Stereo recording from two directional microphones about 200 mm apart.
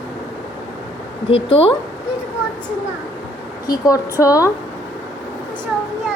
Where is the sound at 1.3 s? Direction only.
30° left (ahead or behind).